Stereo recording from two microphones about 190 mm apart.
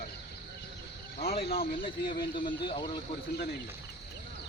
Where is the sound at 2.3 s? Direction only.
25° left (ahead or behind).